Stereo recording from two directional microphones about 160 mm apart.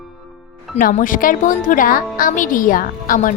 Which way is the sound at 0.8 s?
60° left (ahead or behind).